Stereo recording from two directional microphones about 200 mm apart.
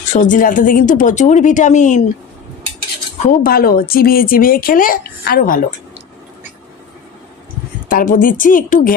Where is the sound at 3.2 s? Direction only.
45° left (ahead or behind).